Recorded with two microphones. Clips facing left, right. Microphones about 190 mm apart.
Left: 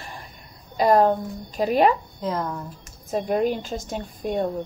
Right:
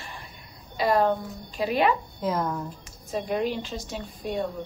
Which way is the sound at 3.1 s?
45° left (ahead or behind).